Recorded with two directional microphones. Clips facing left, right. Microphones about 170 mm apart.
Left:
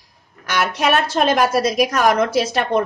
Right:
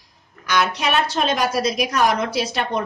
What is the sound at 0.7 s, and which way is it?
A woman's voice, 50° left (ahead or behind).